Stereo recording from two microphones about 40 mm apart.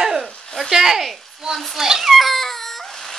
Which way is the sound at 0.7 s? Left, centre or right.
Centre.